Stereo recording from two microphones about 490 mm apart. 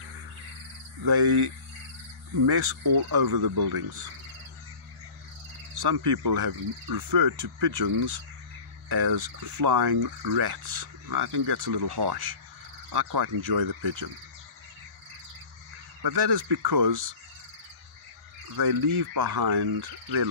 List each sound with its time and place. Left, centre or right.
1.0 s speech: right
2.4 s speech: right
5.8 s speech: right
8.8 s speech: right
16.0 s speech: right
18.6 s speech: right